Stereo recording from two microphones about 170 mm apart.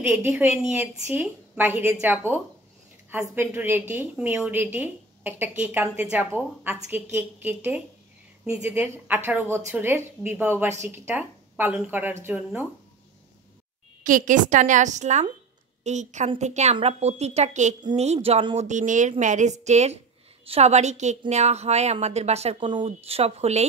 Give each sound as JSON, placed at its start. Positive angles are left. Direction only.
{"t": 0.0, "sound": "a woman's voice", "side_deg": -15}
{"t": 14.0, "sound": "a woman's voice", "side_deg": -50}
{"t": 18.7, "sound": "a woman's voice", "side_deg": -45}